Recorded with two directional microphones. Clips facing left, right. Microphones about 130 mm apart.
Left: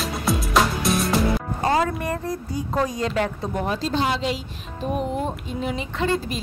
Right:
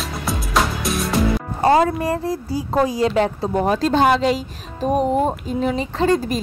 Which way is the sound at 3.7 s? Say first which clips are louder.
Right 8 dB; 50° right (ahead or behind).